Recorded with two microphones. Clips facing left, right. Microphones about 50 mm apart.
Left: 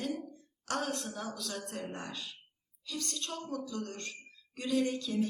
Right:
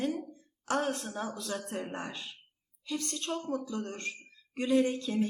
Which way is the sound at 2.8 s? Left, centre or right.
Right.